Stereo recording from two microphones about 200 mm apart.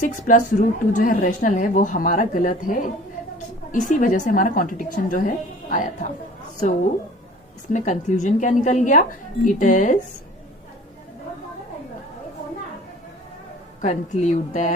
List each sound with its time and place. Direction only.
0.3 s a woman's voice: 40° left (ahead or behind)
13.8 s a woman's voice: 35° left (ahead or behind)